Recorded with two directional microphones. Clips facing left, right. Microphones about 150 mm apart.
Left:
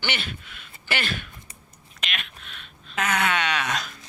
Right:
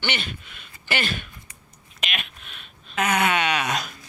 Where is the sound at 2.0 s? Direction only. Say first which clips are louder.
Right 2 dB; 10° right (ahead or behind).